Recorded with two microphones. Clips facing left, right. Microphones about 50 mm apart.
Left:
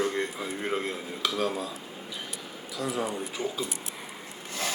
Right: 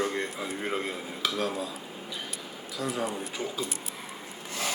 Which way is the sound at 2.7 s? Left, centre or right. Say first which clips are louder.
Left 1 dB; centre.